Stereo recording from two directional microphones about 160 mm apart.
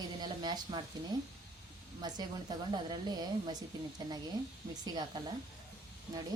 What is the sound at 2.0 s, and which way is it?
A woman's voice, 25° right (ahead or behind).